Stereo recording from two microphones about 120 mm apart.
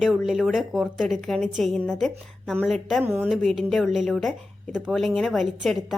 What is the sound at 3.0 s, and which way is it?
Speech, 15° right (ahead or behind).